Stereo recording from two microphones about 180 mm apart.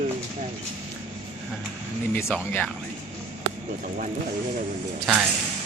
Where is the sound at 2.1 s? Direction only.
10° left (ahead or behind).